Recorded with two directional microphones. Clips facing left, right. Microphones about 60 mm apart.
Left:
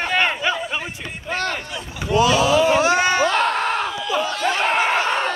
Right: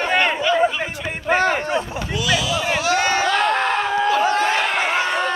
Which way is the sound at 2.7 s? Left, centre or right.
Left.